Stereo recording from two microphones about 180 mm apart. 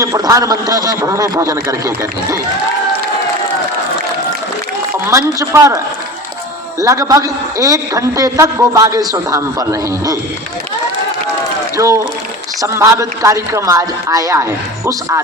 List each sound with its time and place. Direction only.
0.0 s a man's voice: 20° right (ahead or behind)
5.4 s a man's voice: 20° right (ahead or behind)
11.8 s a man's voice: 20° right (ahead or behind)